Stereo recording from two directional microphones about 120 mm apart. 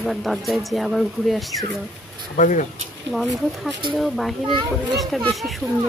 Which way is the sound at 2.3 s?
90° left.